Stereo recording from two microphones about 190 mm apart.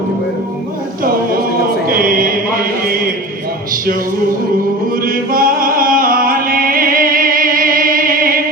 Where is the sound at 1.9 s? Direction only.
50° right (ahead or behind).